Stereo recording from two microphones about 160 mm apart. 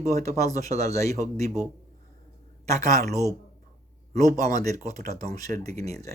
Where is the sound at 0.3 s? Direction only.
20° left (ahead or behind).